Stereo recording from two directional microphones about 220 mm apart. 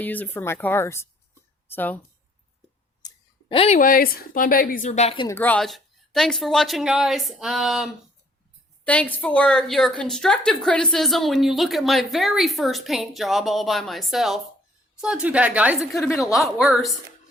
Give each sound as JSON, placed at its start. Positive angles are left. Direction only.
{"t": 0.0, "sound": "speech", "side_deg": 10}
{"t": 3.5, "sound": "a woman's voice", "side_deg": 30}
{"t": 5.4, "sound": "a woman's voice", "side_deg": 5}